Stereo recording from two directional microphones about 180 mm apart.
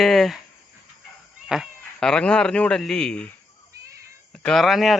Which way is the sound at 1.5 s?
5° right (ahead or behind).